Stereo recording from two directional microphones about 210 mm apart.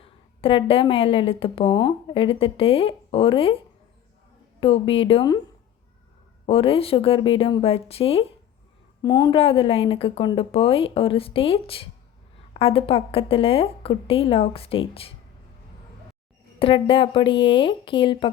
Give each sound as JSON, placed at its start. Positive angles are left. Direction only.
{"t": 0.0, "sound": "a woman's voice", "side_deg": 25}
{"t": 4.6, "sound": "a woman's voice", "side_deg": 25}
{"t": 6.4, "sound": "a woman's voice", "side_deg": 25}
{"t": 16.6, "sound": "a woman's voice", "side_deg": 25}